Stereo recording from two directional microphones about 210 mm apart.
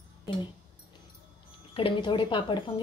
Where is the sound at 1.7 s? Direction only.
25° left (ahead or behind).